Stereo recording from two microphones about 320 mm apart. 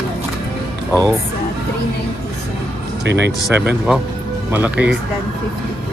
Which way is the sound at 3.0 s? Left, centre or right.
Right.